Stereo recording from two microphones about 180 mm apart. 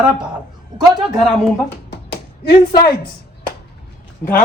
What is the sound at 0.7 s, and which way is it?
Speech, 25° right (ahead or behind).